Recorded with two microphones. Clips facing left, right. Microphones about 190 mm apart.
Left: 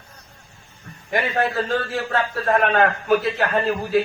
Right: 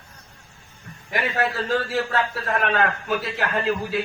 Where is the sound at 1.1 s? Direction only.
45° left (ahead or behind).